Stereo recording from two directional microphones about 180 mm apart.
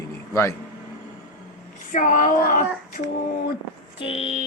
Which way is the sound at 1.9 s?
45° left (ahead or behind).